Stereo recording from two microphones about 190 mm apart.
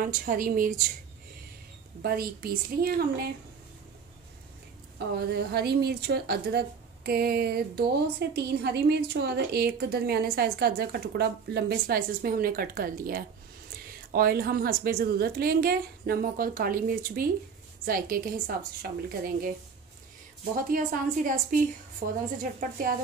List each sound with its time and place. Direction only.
0.2 s a woman's voice: 50° right (ahead or behind)
2.0 s a woman's voice: 55° right (ahead or behind)
4.9 s a woman's voice: 60° right (ahead or behind)
20.5 s a woman's voice: 45° right (ahead or behind)